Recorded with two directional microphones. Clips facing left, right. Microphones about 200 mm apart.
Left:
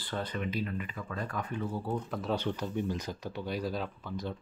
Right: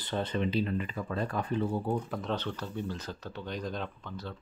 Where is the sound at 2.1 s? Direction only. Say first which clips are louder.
Left 1 dB; 5° left (ahead or behind).